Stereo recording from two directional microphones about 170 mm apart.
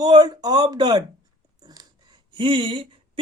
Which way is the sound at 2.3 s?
30° right (ahead or behind).